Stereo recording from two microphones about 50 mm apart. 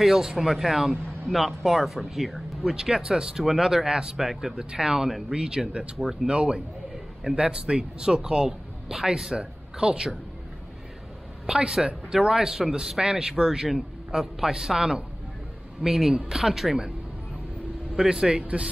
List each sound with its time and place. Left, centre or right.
0.0 s speech: centre
2.6 s speech: centre
11.4 s speech: centre
17.9 s speech: centre